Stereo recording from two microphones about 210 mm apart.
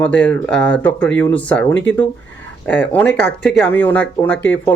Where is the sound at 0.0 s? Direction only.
5° left (ahead or behind).